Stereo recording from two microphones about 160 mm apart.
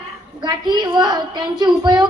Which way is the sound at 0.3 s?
25° right (ahead or behind).